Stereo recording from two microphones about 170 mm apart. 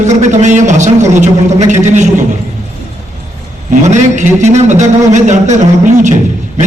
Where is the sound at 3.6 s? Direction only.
45° right (ahead or behind).